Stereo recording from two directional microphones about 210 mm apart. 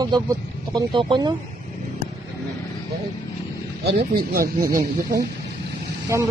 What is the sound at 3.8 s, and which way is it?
Speech, 50° right (ahead or behind).